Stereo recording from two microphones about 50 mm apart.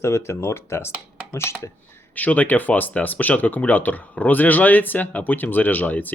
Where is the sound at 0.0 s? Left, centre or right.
Left.